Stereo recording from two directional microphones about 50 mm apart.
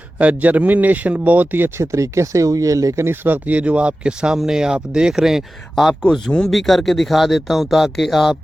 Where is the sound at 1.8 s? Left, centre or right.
Right.